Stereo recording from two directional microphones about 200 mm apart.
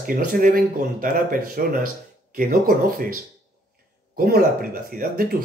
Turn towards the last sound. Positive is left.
turn(degrees=-45)  # may be behind; listen again after turning